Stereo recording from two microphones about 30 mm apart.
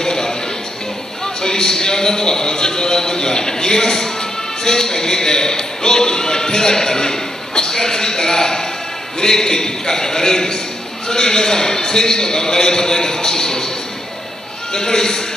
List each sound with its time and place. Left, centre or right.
0.0 s a sound: left
1.2 s a man's voice: left
14.7 s a man's voice: left